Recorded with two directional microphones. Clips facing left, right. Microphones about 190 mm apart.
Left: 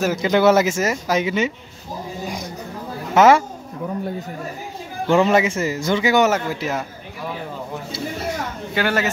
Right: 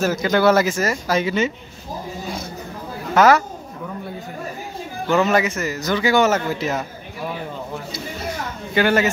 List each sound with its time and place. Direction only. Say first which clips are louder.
0.0 s speech: left 1 dB; 15° left (ahead or behind)
2.2 s a sound: left 1 dB; 15° left (ahead or behind)
3.2 s speech: left 1 dB; 25° left (ahead or behind)
5.0 s speech: left 2 dB; 25° left (ahead or behind); by 6.9 s 10° left (ahead or behind)
8.7 s a man's voice: right 4 dB; centre (ahead or behind)